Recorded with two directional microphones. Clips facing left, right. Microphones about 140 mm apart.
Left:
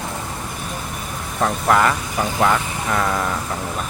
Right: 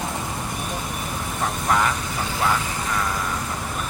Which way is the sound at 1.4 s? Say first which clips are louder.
Left 6 dB; 80° left.